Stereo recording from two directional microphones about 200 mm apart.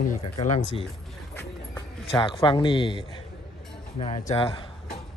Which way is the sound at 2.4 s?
25° left (ahead or behind).